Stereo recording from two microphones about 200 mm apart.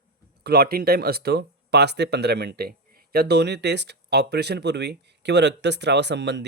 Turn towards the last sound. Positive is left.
turn(degrees=-60)  # may be behind; listen again after turning